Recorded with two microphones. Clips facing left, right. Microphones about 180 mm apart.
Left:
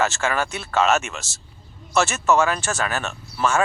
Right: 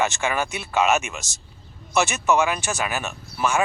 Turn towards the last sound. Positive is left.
turn(degrees=-15)  # may be behind; listen again after turning